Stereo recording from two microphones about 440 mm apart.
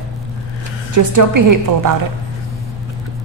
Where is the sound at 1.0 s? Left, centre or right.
Right.